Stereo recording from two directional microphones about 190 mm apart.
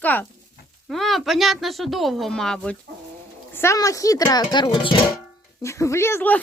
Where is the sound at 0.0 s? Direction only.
10° left (ahead or behind).